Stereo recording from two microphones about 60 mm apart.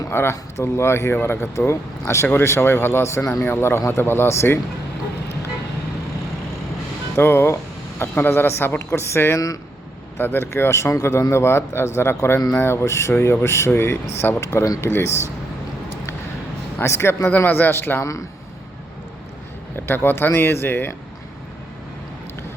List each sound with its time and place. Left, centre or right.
0.1 s a man's voice: left
1.5 s a man's voice: left
7.2 s a man's voice: left
13.7 s speech: left
14.4 s a man's voice: left
16.8 s a man's voice: left
17.3 s speech: left
18.0 s speech: left
19.7 s speech: left